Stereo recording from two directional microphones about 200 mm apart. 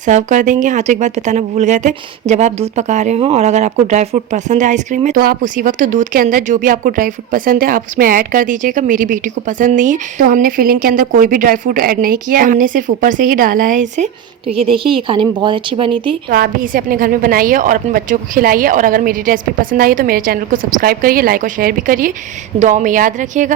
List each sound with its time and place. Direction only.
0.0 s speech: 40° right (ahead or behind)
14.7 s a woman's voice: 25° right (ahead or behind)
16.3 s a woman's voice: 45° right (ahead or behind)